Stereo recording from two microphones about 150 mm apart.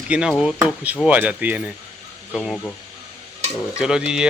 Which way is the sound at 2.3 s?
Centre (ahead or behind).